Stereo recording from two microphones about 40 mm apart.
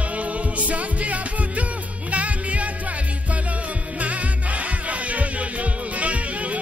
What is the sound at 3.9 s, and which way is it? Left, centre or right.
Music, right.